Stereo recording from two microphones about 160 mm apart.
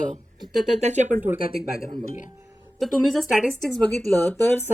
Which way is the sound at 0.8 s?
45° right (ahead or behind).